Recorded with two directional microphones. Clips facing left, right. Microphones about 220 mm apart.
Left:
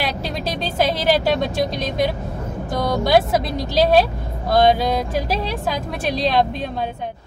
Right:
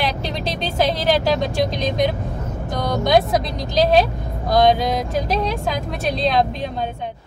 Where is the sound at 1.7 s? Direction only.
Centre (ahead or behind).